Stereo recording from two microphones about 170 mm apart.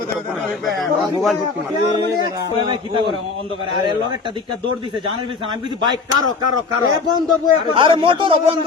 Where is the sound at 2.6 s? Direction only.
30° right (ahead or behind).